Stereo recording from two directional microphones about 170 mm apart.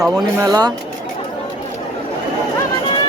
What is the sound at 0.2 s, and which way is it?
Speech, 20° right (ahead or behind).